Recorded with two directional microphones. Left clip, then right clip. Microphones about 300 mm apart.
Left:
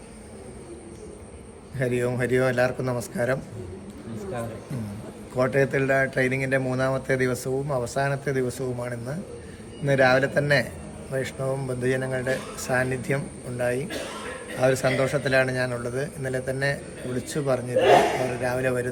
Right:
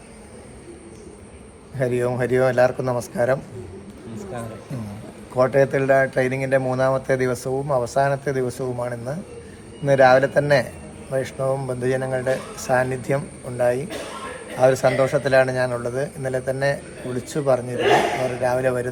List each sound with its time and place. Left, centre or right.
1.8 s speech: centre
4.2 s a sound: centre
5.4 s a man's voice: centre